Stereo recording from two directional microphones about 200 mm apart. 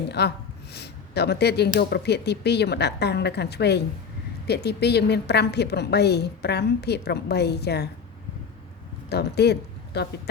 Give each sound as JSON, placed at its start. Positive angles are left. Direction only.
{"t": 0.1, "sound": "speech", "side_deg": 55}
{"t": 9.0, "sound": "speech", "side_deg": 55}